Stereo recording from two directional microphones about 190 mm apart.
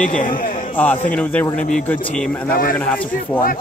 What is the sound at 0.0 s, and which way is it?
Speech, 45° left (ahead or behind).